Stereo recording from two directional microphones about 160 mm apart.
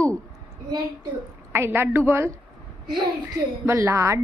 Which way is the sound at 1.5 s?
15° right (ahead or behind).